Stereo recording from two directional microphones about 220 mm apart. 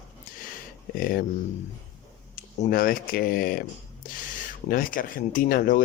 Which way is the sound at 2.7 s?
40° left (ahead or behind).